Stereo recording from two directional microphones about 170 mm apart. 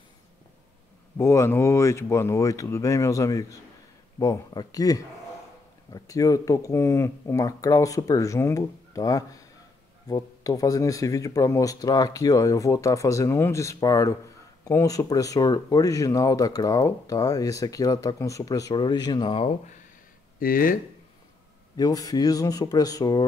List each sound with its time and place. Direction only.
1.1 s speech: 15° left (ahead or behind); by 19.5 s 30° left (ahead or behind)
20.3 s speech: 55° left (ahead or behind)
21.7 s speech: 20° left (ahead or behind)